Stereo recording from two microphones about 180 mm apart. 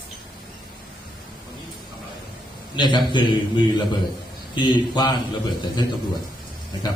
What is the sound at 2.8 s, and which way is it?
A man's voice, 25° left (ahead or behind).